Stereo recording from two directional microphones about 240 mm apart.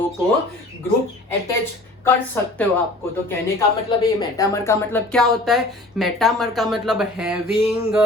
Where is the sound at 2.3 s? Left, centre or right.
Centre.